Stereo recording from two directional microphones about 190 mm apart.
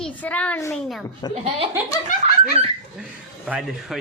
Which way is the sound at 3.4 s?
5° right (ahead or behind).